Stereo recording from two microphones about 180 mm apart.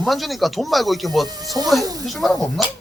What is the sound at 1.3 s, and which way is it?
Speech, 20° right (ahead or behind).